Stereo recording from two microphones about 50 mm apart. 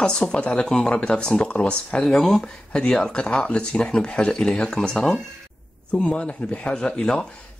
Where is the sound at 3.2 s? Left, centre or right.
Left.